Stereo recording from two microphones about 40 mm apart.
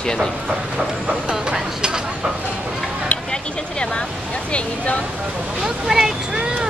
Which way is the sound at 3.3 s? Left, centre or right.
Left.